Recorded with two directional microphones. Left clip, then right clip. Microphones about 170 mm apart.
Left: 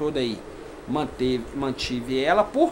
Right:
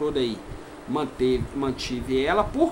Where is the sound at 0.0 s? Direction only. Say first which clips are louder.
Even; 25° left (ahead or behind).